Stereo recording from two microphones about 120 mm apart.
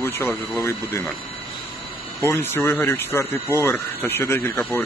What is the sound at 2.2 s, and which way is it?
Speech, 20° left (ahead or behind).